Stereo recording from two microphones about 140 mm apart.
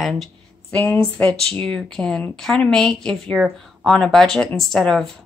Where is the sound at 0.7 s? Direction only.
15° left (ahead or behind).